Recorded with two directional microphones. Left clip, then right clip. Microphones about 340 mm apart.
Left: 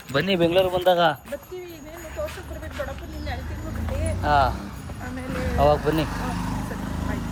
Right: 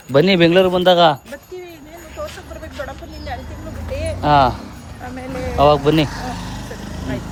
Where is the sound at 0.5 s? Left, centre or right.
Right.